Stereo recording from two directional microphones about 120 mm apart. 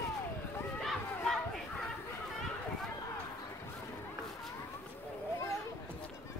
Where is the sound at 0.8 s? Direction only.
5° left (ahead or behind).